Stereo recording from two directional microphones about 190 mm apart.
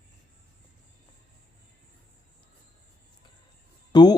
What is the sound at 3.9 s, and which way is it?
Speech, 20° left (ahead or behind).